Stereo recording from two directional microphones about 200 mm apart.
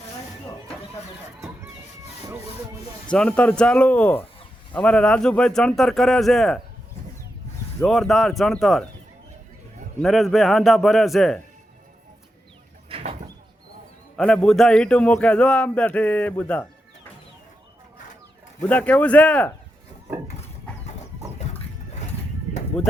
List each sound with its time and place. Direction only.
3.1 s a man's voice: 5° left (ahead or behind)
7.9 s a man's voice: centre (ahead or behind)
10.0 s a man's voice: centre (ahead or behind)
14.2 s a man's voice: 5° left (ahead or behind)
18.6 s speech: 5° left (ahead or behind)
22.8 s a man's voice: 5° left (ahead or behind)